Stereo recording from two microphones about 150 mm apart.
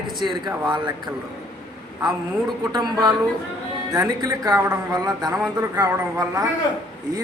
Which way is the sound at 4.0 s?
25° right (ahead or behind).